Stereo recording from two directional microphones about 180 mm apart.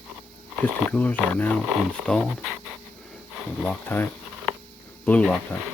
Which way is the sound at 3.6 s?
10° left (ahead or behind).